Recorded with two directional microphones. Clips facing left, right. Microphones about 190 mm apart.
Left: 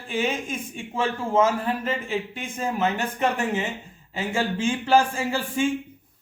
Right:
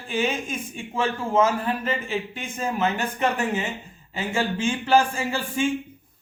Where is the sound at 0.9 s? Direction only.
25° left (ahead or behind).